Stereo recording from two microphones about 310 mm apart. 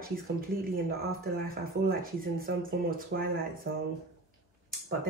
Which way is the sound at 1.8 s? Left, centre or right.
Right.